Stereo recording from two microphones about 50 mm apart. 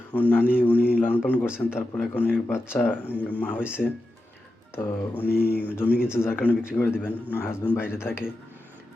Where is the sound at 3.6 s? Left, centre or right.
Right.